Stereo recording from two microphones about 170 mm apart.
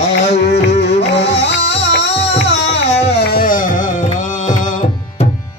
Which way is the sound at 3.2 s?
60° left (ahead or behind).